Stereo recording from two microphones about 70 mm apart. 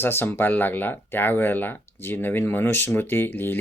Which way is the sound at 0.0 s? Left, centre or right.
Left.